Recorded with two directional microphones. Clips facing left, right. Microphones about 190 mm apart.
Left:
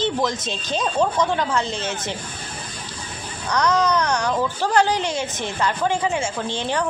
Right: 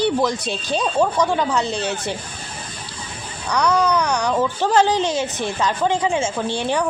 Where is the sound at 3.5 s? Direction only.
10° right (ahead or behind).